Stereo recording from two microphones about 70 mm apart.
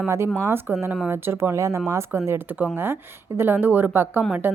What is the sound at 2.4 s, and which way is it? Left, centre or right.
A woman's voice, right.